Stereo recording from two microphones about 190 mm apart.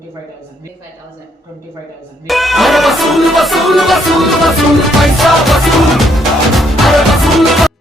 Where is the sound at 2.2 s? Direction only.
Centre (ahead or behind).